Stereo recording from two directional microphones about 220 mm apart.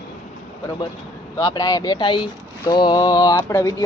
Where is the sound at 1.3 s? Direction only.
15° left (ahead or behind).